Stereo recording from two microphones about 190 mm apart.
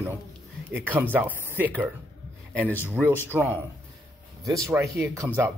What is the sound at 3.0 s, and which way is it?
Speech, 10° right (ahead or behind).